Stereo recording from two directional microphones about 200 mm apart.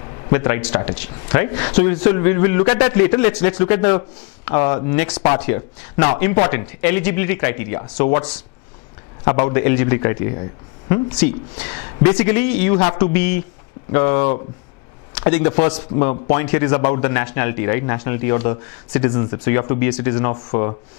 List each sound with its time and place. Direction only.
0.3 s a man's voice: 15° left (ahead or behind)
11.1 s a man's voice: 10° left (ahead or behind)